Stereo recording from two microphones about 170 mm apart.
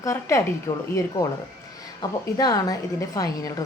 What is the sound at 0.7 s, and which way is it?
Speech, 30° left (ahead or behind).